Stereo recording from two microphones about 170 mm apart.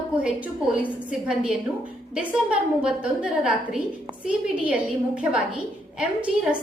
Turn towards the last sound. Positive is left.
turn(degrees=-5)  # may be behind; listen again after turning